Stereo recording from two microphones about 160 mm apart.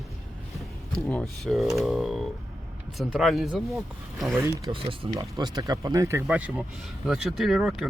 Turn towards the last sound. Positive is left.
turn(degrees=0)  # may be behind; listen again after turning